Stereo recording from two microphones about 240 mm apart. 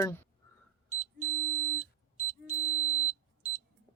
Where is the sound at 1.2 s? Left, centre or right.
Centre.